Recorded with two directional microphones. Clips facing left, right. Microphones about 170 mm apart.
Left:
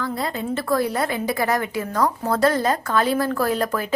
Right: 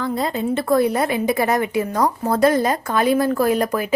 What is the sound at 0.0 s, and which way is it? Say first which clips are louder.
A woman's voice: right 4 dB; 20° right (ahead or behind).